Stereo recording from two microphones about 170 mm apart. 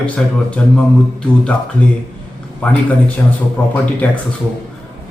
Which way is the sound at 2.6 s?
5° left (ahead or behind).